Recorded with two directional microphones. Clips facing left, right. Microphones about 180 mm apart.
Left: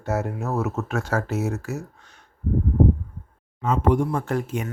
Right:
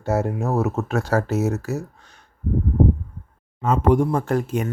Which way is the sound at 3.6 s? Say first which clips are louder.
Right 3 dB; 45° right (ahead or behind).